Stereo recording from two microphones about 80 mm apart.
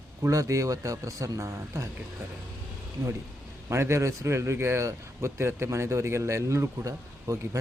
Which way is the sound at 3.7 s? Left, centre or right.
Right.